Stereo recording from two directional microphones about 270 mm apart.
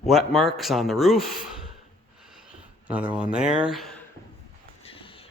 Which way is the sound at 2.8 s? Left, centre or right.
Centre.